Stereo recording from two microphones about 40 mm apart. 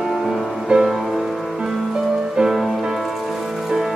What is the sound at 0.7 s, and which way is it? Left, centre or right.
Music, centre.